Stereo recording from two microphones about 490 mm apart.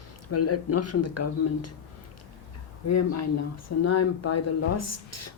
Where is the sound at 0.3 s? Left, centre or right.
Left.